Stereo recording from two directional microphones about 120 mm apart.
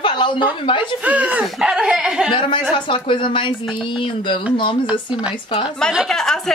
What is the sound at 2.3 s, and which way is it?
Speech, 45° left (ahead or behind).